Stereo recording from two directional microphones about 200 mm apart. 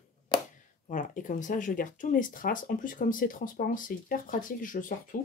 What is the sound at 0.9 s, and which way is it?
Speech, 40° left (ahead or behind).